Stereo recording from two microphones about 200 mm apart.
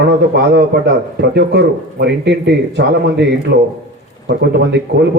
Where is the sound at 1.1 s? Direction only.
55° right (ahead or behind).